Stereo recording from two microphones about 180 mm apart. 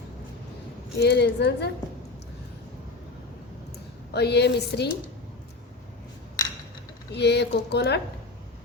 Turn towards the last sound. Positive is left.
turn(degrees=70)  # may be behind; listen again after turning